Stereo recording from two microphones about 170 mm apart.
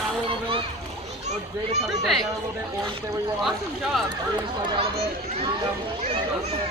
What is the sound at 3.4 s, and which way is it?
Speech, centre (ahead or behind).